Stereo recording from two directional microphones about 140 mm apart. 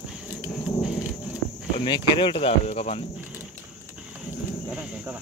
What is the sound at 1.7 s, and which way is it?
Speech, 35° left (ahead or behind).